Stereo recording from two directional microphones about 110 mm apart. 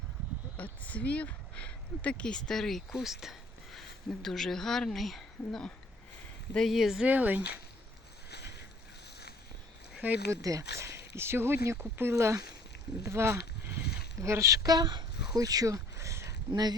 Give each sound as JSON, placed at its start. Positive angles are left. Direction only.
{"t": 0.5, "sound": "speech", "side_deg": 15}
{"t": 7.1, "sound": "speech", "side_deg": -15}
{"t": 9.9, "sound": "a sound", "side_deg": -10}
{"t": 10.4, "sound": "speech", "side_deg": -30}
{"t": 16.5, "sound": "speech", "side_deg": -40}